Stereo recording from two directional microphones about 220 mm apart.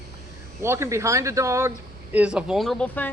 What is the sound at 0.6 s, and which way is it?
A woman's voice, 10° right (ahead or behind).